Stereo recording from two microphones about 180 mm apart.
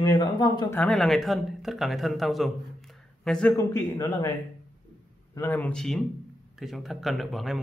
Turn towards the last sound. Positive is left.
turn(degrees=0)  # may be behind; listen again after turning